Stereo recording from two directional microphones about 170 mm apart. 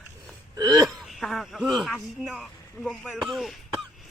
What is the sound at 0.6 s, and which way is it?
Hiccup, 20° right (ahead or behind).